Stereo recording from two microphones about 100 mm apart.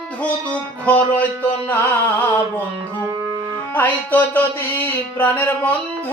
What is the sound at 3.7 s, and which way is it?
Music, 20° left (ahead or behind).